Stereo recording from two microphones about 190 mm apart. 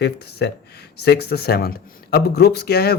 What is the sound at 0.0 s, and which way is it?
Speech, 60° left (ahead or behind).